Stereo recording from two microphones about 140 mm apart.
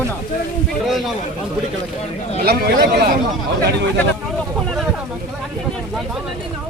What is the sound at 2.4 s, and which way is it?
Speech, 90° right.